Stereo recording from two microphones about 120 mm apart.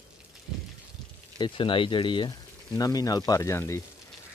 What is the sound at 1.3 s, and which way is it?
Speech, 40° left (ahead or behind).